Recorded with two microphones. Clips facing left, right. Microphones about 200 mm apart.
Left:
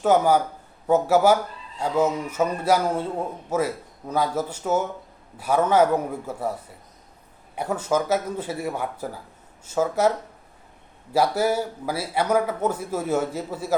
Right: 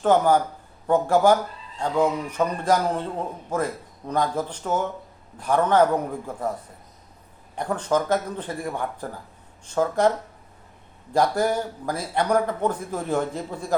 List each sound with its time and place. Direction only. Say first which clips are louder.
0.0 s a man's voice: even; 10° left (ahead or behind)
11.1 s a man's voice: even; 5° left (ahead or behind)